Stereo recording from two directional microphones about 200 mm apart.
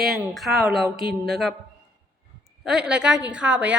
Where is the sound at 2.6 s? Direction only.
5° right (ahead or behind).